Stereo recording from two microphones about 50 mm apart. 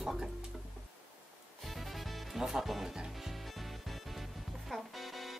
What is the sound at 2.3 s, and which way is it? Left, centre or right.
Music, centre.